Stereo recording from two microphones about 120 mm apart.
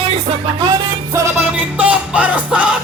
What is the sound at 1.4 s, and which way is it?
Music, 10° right (ahead or behind).